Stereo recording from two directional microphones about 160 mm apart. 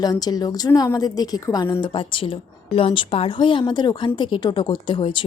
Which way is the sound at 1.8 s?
35° left (ahead or behind).